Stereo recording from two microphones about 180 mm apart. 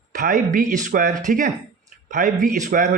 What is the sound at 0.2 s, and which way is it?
Speech, 45° right (ahead or behind).